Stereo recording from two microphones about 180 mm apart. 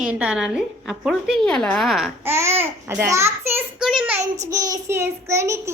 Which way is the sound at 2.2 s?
15° right (ahead or behind).